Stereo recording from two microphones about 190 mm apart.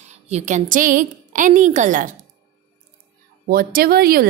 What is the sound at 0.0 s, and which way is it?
A woman's voice, 35° right (ahead or behind).